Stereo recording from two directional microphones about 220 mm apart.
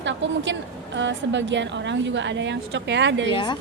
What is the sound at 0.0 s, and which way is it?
A woman's voice, 55° right (ahead or behind).